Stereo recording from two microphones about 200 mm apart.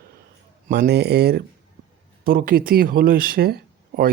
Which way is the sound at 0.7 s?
55° right (ahead or behind).